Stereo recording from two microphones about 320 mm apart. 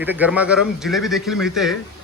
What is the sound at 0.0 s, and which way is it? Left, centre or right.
Speech, centre.